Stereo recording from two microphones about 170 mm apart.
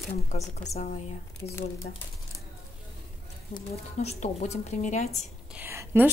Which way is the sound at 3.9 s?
40° left (ahead or behind).